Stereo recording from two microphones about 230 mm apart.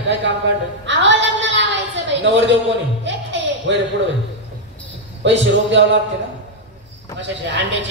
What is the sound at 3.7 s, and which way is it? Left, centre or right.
Speech, right.